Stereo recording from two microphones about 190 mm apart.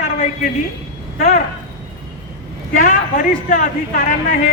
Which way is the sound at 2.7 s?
40° left (ahead or behind).